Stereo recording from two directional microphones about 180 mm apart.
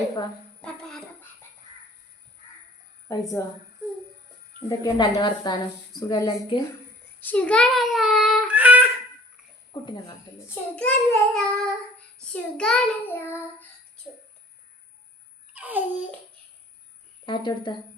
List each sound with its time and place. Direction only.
0.6 s music: 5° left (ahead or behind)
3.4 s a woman's voice: 15° left (ahead or behind)
4.8 s a woman's voice: 20° left (ahead or behind)
7.2 s child singing: 10° left (ahead or behind); by 8.9 s 10° right (ahead or behind)
9.7 s a woman's voice: 25° left (ahead or behind)
10.5 s child singing: 10° left (ahead or behind)
15.5 s babbling: 10° right (ahead or behind)
17.2 s a woman's voice: 25° left (ahead or behind)